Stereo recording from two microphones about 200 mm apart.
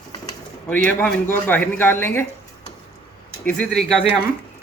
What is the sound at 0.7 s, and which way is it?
Speech, 10° left (ahead or behind).